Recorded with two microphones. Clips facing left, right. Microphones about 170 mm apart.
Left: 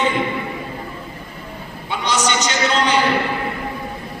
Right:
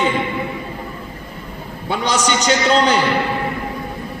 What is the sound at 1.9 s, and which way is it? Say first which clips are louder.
A man's voice: right 2 dB; 35° right (ahead or behind).